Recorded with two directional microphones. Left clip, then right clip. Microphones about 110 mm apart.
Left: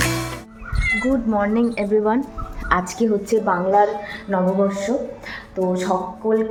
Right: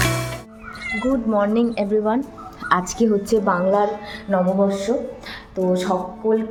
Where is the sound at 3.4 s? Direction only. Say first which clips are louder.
Left 4 dB; 25° right (ahead or behind).